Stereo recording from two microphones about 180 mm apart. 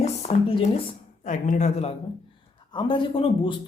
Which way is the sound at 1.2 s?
40° left (ahead or behind).